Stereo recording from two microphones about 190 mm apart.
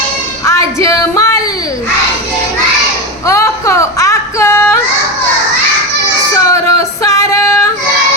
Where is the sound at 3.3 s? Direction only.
15° left (ahead or behind).